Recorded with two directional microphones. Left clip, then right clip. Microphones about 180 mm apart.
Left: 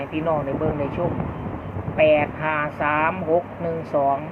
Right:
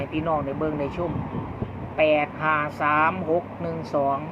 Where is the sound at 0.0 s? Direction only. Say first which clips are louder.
Left 2 dB; 15° right (ahead or behind).